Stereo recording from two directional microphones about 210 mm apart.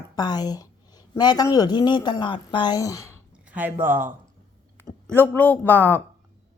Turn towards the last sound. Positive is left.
turn(degrees=10)  # may be behind; listen again after turning